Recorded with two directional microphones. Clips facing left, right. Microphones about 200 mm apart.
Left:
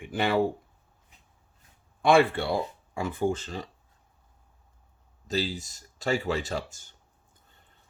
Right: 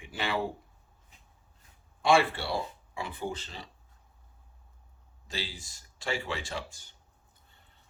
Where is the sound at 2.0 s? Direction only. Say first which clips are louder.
Left 4 dB; 55° left (ahead or behind).